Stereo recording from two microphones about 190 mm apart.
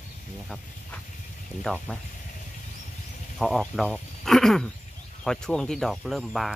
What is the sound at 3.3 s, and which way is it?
Speech, centre (ahead or behind).